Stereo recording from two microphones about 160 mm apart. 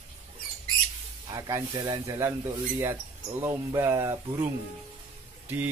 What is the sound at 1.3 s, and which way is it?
Speech, 25° right (ahead or behind).